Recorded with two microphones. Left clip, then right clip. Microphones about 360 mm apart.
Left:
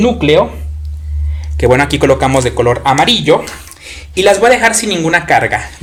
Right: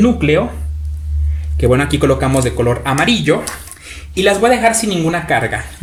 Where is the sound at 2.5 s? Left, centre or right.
Left.